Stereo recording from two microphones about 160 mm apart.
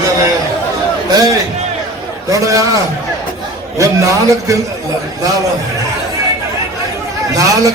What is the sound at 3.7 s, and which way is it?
Speech, 20° right (ahead or behind).